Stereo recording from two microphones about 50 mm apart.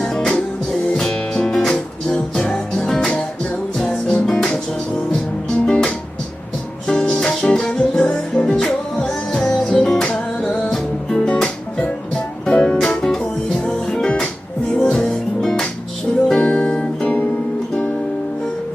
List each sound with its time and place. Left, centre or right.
0.0 s music: centre
5.6 s music: centre
12.5 s music: centre
16.3 s music: left